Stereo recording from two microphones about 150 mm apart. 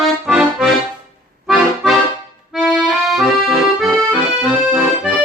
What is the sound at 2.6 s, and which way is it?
Accordion, centre (ahead or behind).